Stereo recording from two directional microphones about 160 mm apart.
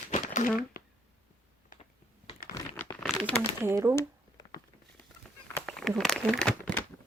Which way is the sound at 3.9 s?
20° left (ahead or behind).